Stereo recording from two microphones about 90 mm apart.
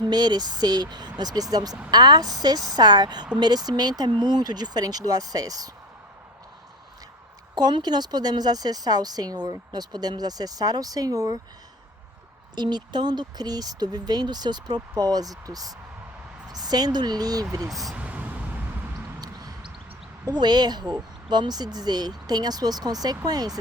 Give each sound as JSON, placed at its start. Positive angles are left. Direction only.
{"t": 0.0, "sound": "speech", "side_deg": -50}
{"t": 7.5, "sound": "speech", "side_deg": -50}
{"t": 12.5, "sound": "speech", "side_deg": -55}
{"t": 17.7, "sound": "speech", "side_deg": 0}
{"t": 17.9, "sound": "vehicle", "side_deg": -15}
{"t": 19.2, "sound": "a sound", "side_deg": -45}
{"t": 20.2, "sound": "speech", "side_deg": -50}